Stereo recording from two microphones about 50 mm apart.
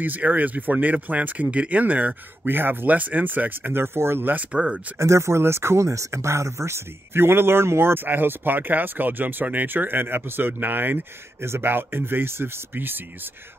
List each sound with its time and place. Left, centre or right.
0.0 s speech: right
3.8 s speech: right
4.3 s speech: right
4.9 s speech: right
11.4 s speech: right